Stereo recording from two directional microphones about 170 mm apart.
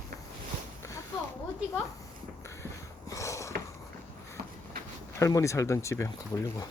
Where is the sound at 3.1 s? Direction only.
20° left (ahead or behind).